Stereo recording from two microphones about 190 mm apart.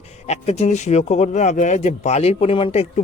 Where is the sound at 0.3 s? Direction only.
35° left (ahead or behind).